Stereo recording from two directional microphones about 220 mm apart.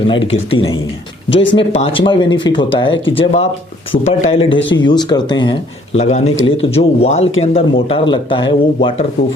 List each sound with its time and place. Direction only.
0.1 s speech: 25° left (ahead or behind)
1.3 s speech: 55° left (ahead or behind)
1.8 s speech: 25° left (ahead or behind)